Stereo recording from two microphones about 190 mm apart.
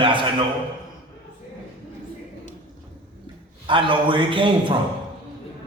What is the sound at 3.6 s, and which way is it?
A man's voice, 25° right (ahead or behind).